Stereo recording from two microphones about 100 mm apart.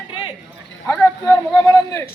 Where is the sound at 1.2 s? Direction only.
30° left (ahead or behind).